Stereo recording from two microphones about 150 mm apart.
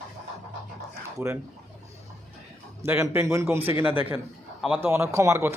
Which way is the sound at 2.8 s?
15° right (ahead or behind).